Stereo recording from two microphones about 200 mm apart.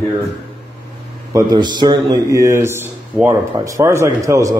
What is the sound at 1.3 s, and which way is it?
A man's voice, 20° right (ahead or behind).